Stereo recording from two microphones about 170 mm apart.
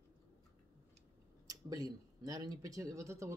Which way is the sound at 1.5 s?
20° right (ahead or behind).